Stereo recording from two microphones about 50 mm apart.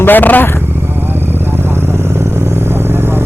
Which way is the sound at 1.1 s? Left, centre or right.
Right.